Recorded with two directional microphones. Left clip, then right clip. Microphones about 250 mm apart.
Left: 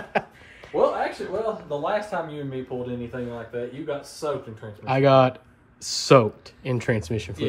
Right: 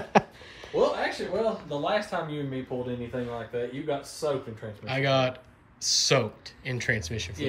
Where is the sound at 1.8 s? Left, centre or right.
Left.